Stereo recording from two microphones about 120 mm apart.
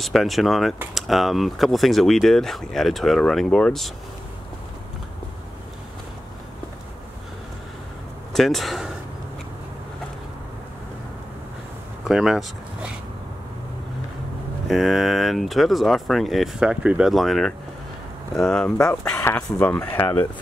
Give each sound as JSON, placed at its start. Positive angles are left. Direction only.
{"t": 0.0, "sound": "speech", "side_deg": 0}
{"t": 8.3, "sound": "speech", "side_deg": 0}
{"t": 12.1, "sound": "speech", "side_deg": -5}
{"t": 14.7, "sound": "speech", "side_deg": 0}